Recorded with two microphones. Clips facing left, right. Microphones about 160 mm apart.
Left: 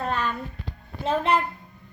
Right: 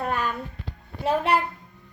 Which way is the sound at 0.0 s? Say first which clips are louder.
Even; 10° right (ahead or behind).